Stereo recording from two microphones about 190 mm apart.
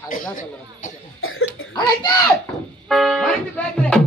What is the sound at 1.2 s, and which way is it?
Cough, 90° left.